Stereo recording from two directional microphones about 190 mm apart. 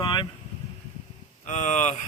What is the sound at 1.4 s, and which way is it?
Speech, 40° left (ahead or behind).